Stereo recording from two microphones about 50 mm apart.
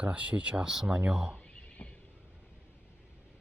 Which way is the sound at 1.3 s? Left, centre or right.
Left.